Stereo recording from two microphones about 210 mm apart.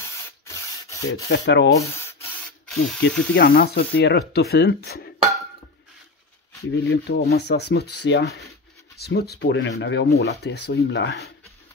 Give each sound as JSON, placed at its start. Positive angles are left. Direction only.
{"t": 0.0, "sound": "rub", "side_deg": 15}
{"t": 1.3, "sound": "speech", "side_deg": 55}
{"t": 1.8, "sound": "spray", "side_deg": 10}
{"t": 3.0, "sound": "speech", "side_deg": 45}
{"t": 6.7, "sound": "speech", "side_deg": 55}